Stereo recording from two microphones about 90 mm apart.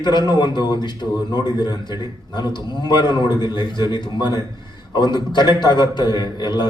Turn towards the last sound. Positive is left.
turn(degrees=55)  # may be behind; listen again after turning